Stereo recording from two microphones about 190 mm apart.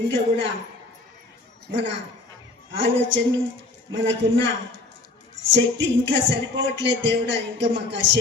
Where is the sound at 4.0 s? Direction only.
75° right (ahead or behind).